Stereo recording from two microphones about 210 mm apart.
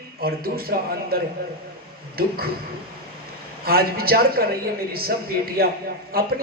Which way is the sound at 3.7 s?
45° right (ahead or behind).